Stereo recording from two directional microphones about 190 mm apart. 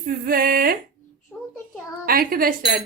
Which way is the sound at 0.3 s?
50° right (ahead or behind).